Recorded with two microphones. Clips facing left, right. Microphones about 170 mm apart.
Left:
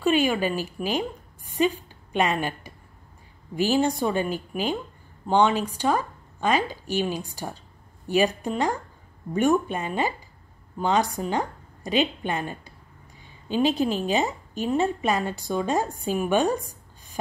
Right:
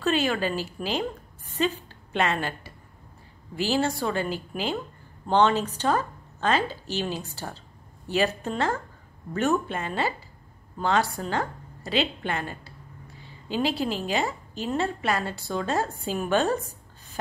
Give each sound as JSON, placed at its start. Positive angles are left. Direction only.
{"t": 0.0, "sound": "a woman's voice", "side_deg": 15}